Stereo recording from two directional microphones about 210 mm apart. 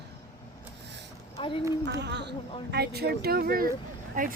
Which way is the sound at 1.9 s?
55° right (ahead or behind).